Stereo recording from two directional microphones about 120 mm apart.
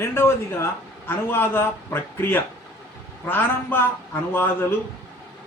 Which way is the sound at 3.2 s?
15° left (ahead or behind).